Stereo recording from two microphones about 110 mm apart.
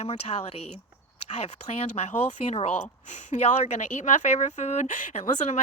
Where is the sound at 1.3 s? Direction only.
85° left.